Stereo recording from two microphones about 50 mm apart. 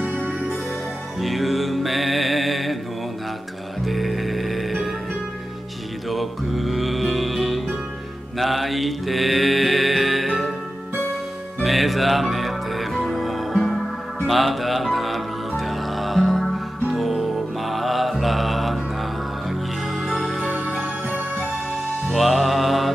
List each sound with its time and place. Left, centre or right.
0.0 s music: right
1.2 s music: centre
3.8 s music: centre
6.0 s music: centre
8.4 s mantra: centre
11.6 s music: centre
20.0 s music: centre
22.1 s music: centre